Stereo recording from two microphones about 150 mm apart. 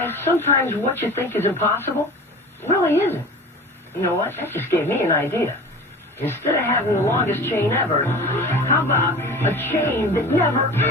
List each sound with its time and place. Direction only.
0.0 s music: 15° left (ahead or behind)